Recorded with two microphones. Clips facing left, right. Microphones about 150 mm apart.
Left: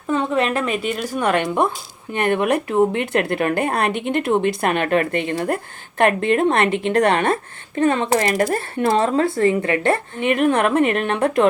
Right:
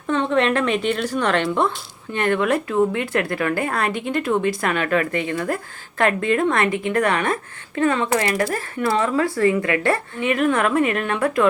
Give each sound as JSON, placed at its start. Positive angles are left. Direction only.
{"t": 0.1, "sound": "speech", "side_deg": 5}